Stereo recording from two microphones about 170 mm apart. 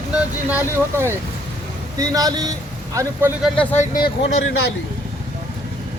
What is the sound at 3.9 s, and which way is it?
Speech, 65° left (ahead or behind).